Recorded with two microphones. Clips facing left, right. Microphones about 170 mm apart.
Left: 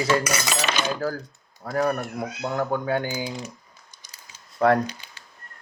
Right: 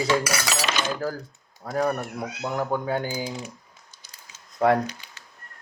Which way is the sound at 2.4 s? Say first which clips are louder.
Left 1 dB; 60° left (ahead or behind).